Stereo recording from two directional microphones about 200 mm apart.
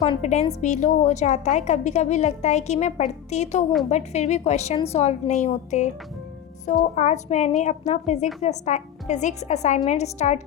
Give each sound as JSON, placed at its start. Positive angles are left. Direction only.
{"t": 0.0, "sound": "a woman's voice", "side_deg": 35}
{"t": 6.9, "sound": "a woman's voice", "side_deg": 35}